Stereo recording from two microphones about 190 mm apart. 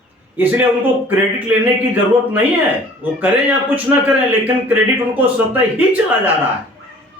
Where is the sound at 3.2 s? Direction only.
10° right (ahead or behind).